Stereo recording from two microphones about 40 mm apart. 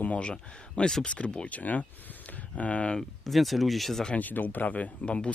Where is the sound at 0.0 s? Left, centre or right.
Left.